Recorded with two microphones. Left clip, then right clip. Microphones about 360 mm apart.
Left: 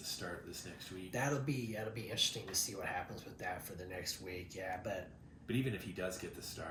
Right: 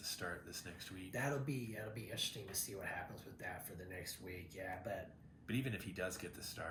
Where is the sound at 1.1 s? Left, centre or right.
Centre.